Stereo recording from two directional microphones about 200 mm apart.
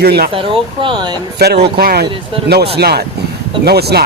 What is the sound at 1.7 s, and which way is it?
Speech, 50° right (ahead or behind).